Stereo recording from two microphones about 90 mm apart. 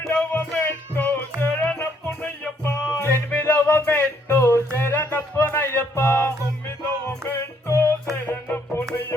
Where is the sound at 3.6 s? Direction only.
25° left (ahead or behind).